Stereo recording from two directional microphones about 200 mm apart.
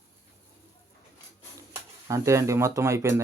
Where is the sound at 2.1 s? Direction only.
15° right (ahead or behind).